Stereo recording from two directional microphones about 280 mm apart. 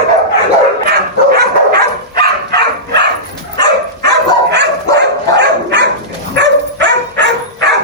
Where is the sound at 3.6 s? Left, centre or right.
Right.